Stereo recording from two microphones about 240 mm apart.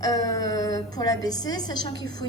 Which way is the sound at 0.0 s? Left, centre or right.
Centre.